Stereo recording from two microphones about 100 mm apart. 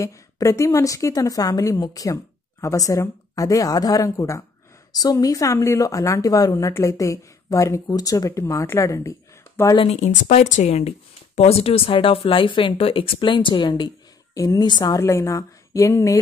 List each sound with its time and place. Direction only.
0.0 s a woman's voice: 30° left (ahead or behind)
9.8 s speech: 85° left
11.9 s a woman's voice: 65° left (ahead or behind); by 15.0 s 45° left (ahead or behind)
15.0 s a woman's voice: 30° left (ahead or behind)